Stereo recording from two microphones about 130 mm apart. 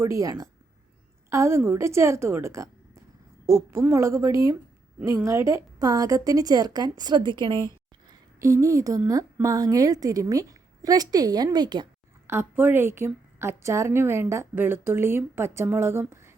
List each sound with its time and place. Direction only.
0.0 s a woman's voice: 25° right (ahead or behind)
8.4 s a woman's voice: 25° right (ahead or behind)
12.3 s a woman's voice: 15° right (ahead or behind)